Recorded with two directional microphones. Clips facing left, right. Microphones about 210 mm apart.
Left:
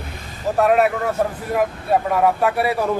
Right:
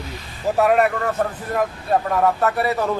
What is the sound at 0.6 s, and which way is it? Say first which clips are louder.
Speech: left 1 dB; 5° left (ahead or behind).